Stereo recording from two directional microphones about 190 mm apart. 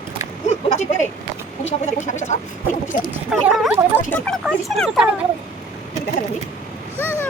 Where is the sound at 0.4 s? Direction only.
35° left (ahead or behind).